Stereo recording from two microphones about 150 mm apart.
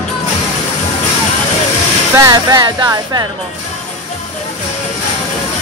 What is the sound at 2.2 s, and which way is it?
Speech, 25° right (ahead or behind).